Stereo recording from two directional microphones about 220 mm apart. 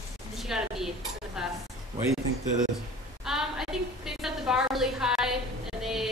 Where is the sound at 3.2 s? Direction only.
Centre (ahead or behind).